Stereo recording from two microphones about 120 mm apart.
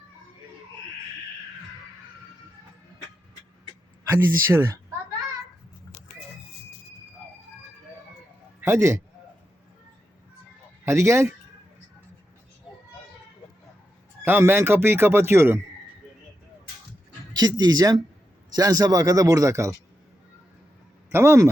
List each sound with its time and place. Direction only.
4.1 s speech: 25° right (ahead or behind)
8.6 s speech: 20° right (ahead or behind)
10.8 s speech: 20° right (ahead or behind)
14.3 s speech: 15° right (ahead or behind)
17.3 s speech: 35° right (ahead or behind)
21.1 s speech: 20° right (ahead or behind)